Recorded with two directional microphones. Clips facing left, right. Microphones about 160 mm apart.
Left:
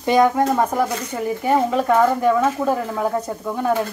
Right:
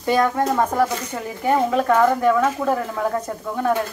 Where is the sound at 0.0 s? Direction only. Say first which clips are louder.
Left 3 dB; 15° left (ahead or behind).